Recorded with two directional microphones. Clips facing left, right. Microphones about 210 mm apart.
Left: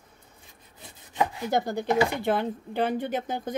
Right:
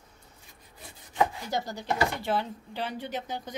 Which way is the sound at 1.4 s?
55° left (ahead or behind).